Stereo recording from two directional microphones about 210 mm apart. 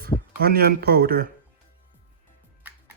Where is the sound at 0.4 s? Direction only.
45° right (ahead or behind).